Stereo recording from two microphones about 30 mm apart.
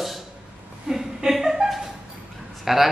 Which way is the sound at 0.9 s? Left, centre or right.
Centre.